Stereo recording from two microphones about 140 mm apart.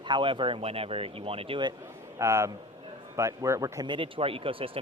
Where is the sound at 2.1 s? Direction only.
20° right (ahead or behind).